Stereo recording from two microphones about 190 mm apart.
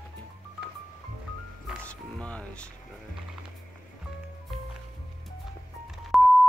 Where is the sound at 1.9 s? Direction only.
5° left (ahead or behind).